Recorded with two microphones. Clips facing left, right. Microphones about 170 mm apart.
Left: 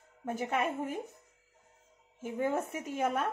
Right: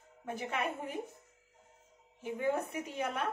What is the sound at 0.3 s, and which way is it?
Speech, 45° left (ahead or behind).